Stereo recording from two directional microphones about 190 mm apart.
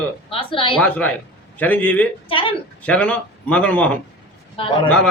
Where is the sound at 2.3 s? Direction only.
30° left (ahead or behind).